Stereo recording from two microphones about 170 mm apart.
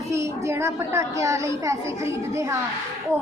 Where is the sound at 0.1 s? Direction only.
15° right (ahead or behind).